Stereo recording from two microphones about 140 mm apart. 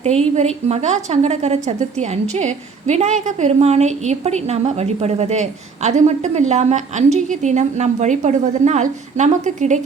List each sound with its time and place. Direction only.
0.0 s a woman's voice: 50° right (ahead or behind)